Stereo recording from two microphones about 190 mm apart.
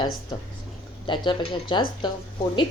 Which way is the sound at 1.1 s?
25° left (ahead or behind).